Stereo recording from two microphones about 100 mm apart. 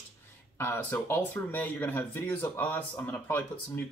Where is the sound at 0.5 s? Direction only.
20° left (ahead or behind).